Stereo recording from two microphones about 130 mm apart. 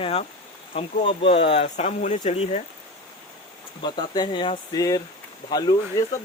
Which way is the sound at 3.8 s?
35° left (ahead or behind).